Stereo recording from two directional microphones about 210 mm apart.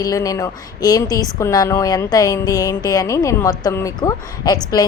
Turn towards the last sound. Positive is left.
turn(degrees=15)  # may be behind; listen again after turning